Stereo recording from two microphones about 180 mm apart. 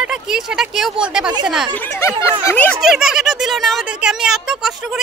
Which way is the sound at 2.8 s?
Centre (ahead or behind).